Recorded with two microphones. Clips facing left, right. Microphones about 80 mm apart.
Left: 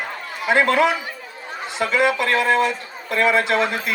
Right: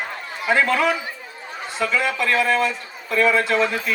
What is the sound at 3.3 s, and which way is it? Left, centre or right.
Speech, left.